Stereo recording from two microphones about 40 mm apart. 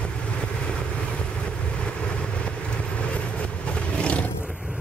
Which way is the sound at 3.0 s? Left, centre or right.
Left.